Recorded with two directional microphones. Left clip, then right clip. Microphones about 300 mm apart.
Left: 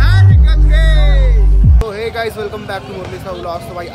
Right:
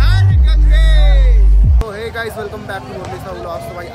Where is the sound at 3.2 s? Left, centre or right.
Centre.